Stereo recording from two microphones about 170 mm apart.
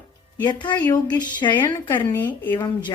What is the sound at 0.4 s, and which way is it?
Speech, 25° left (ahead or behind).